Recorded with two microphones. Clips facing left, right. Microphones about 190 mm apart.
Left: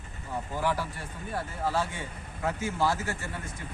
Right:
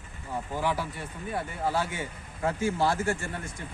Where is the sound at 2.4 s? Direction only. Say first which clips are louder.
Right 4 dB; 30° right (ahead or behind).